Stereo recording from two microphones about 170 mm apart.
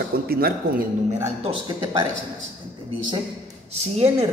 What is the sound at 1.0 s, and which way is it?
Speech, 40° right (ahead or behind).